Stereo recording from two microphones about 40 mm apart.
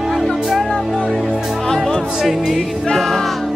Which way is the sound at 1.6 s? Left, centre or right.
Centre.